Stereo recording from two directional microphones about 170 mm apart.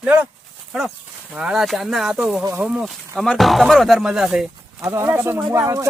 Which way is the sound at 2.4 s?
20° right (ahead or behind).